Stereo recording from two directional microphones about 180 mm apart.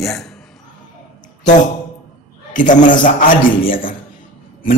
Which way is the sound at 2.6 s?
45° left (ahead or behind).